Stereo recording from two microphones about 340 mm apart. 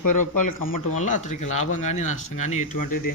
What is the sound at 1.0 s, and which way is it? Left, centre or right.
Speech, left.